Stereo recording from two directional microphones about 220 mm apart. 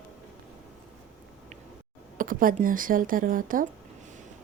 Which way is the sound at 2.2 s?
40° right (ahead or behind).